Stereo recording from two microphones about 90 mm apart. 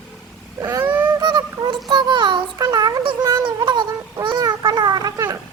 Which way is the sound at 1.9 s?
60° right (ahead or behind).